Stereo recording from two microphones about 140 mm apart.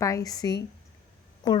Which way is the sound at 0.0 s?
25° left (ahead or behind).